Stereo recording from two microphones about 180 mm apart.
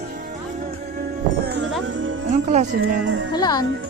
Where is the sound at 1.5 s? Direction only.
70° right (ahead or behind).